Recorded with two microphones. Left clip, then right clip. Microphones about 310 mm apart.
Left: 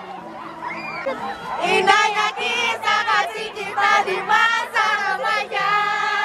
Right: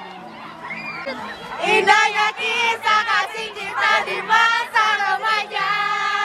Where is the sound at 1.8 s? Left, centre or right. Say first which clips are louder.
Right 1 dB; centre.